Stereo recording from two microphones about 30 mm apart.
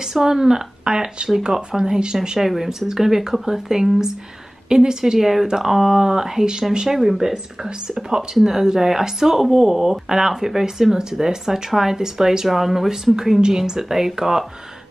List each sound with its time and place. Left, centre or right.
0.1 s speech: centre
2.3 s speech: centre
5.2 s speech: centre
5.9 s speech: centre
12.4 s speech: centre
13.4 s speech: right